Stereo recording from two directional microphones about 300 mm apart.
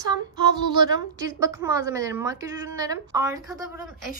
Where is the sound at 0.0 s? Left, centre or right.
Centre.